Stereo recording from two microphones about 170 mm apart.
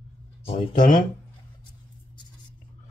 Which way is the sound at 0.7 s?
50° left (ahead or behind).